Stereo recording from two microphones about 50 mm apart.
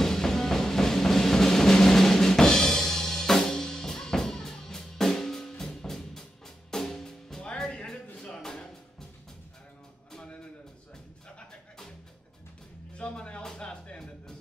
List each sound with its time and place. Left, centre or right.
0.0 s music: centre
12.9 s music: left